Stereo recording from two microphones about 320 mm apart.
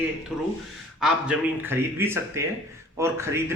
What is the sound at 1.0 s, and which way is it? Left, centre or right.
Speech, centre.